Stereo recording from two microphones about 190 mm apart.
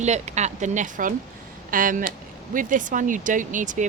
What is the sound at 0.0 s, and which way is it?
Speech, 35° right (ahead or behind).